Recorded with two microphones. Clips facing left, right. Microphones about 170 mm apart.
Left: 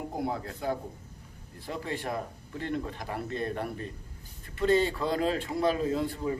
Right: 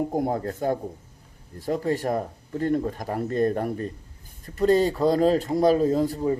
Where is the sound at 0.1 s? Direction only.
45° right (ahead or behind).